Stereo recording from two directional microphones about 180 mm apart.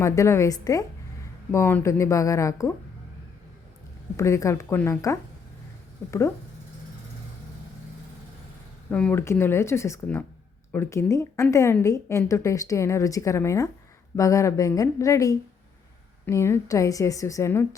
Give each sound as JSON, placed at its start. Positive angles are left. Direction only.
{"t": 0.0, "sound": "a woman's voice", "side_deg": 15}
{"t": 4.2, "sound": "a woman's voice", "side_deg": 15}
{"t": 8.9, "sound": "a woman's voice", "side_deg": 5}